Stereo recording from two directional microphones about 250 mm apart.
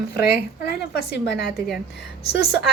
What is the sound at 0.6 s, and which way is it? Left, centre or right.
Speech, left.